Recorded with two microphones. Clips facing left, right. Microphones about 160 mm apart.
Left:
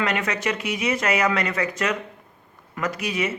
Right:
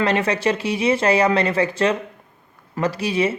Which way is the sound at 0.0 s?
30° right (ahead or behind).